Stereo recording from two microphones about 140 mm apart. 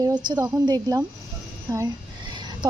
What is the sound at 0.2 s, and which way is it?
A woman's voice, 30° right (ahead or behind).